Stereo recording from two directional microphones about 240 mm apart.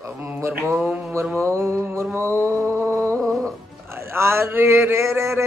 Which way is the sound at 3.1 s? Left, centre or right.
Centre.